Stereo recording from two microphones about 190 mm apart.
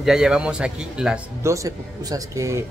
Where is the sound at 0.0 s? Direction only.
5° right (ahead or behind).